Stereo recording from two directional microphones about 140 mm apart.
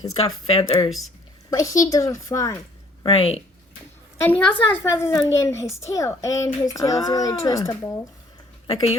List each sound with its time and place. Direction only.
0.4 s speech: 35° left (ahead or behind)
1.5 s speech: 25° left (ahead or behind)
3.1 s speech: 45° left (ahead or behind)
4.2 s a woman's voice: 10° left (ahead or behind); by 7.8 s 30° left (ahead or behind)
8.6 s speech: 45° left (ahead or behind)